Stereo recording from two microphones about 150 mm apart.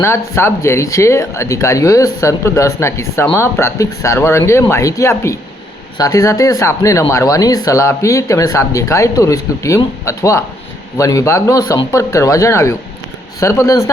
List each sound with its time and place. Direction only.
0.0 s speech: 15° left (ahead or behind)